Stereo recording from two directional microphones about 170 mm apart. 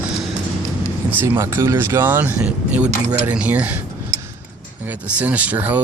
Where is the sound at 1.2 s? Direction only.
15° right (ahead or behind).